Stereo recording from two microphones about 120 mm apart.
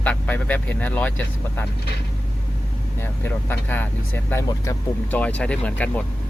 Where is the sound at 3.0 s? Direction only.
15° left (ahead or behind).